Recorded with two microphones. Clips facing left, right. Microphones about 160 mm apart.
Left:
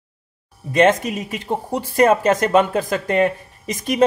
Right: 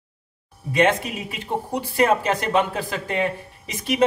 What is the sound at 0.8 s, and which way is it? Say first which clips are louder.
Speech: left 4 dB; 40° left (ahead or behind).